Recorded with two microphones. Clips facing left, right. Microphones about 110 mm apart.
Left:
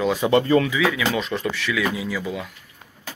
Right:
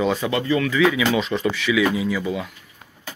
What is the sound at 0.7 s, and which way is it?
Speech, centre (ahead or behind).